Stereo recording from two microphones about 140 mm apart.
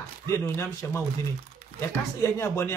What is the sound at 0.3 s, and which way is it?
Speech, 20° left (ahead or behind).